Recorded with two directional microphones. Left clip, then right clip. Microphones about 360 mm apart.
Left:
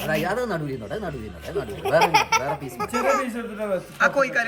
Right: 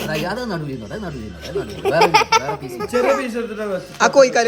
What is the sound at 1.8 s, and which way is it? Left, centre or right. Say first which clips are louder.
Speech: right 4 dB; right.